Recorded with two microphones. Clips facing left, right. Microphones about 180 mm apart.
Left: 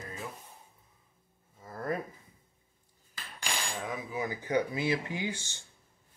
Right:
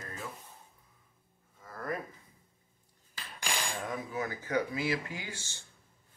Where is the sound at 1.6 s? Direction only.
25° left (ahead or behind).